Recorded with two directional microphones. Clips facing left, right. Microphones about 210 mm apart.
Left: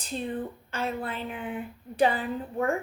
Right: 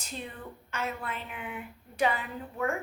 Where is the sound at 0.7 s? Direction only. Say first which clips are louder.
Left 2 dB; 30° left (ahead or behind).